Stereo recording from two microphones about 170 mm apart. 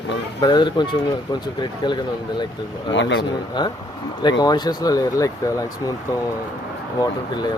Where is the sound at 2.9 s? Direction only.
90° left.